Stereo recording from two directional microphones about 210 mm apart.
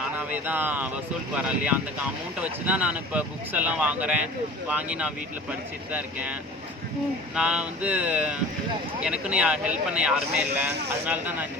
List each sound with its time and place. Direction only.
0.2 s speech: 5° right (ahead or behind)
7.3 s speech: 5° right (ahead or behind)